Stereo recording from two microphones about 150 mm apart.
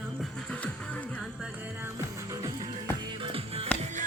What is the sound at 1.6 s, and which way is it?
Music, 15° right (ahead or behind).